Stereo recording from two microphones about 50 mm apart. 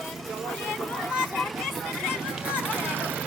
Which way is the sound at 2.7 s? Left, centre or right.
Right.